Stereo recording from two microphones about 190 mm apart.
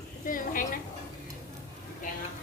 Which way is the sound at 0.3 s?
45° left (ahead or behind).